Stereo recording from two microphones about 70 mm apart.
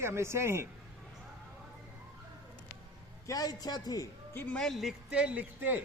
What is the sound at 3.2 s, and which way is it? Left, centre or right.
Speech, left.